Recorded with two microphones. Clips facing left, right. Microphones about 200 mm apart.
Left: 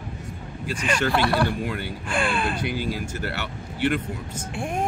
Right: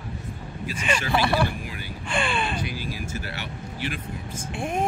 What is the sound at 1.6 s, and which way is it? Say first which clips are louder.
Speech: left 8 dB; 65° left (ahead or behind).